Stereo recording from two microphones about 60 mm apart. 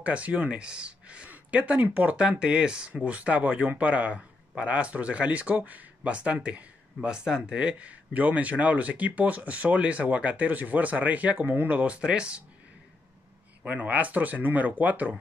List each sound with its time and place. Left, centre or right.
0.0 s a man's voice: right
13.6 s a man's voice: right